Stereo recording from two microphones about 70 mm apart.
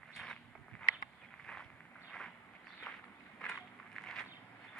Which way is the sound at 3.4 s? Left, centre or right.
Centre.